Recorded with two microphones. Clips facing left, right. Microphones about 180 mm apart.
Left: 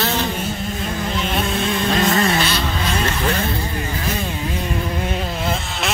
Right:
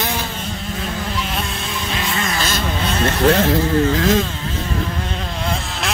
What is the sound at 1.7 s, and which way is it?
Vehicle, 45° left (ahead or behind).